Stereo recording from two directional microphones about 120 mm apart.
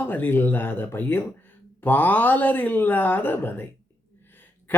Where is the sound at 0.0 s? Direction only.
15° left (ahead or behind).